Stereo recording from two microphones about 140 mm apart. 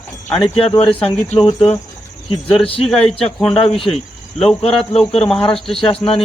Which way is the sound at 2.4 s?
5° left (ahead or behind).